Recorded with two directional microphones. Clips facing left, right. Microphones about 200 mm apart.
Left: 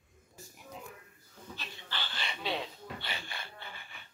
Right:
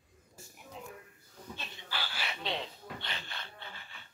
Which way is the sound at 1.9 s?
10° right (ahead or behind).